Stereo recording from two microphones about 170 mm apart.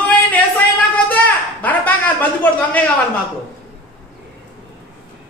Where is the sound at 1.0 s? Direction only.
10° left (ahead or behind).